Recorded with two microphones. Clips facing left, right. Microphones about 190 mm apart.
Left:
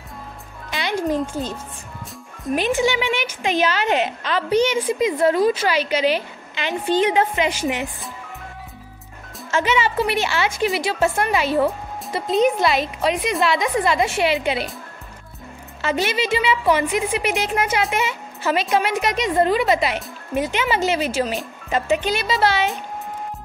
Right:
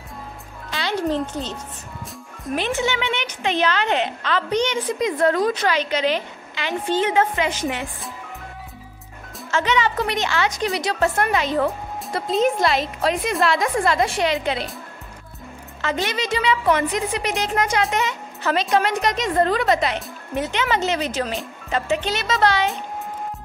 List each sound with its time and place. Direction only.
0.7 s music: 15° left (ahead or behind)
2.5 s a woman's voice: 15° left (ahead or behind)
9.5 s a woman's voice: 10° left (ahead or behind)
15.8 s a woman's voice: 10° left (ahead or behind)
22.2 s speech: centre (ahead or behind)